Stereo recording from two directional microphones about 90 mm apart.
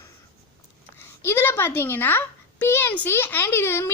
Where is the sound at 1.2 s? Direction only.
25° left (ahead or behind).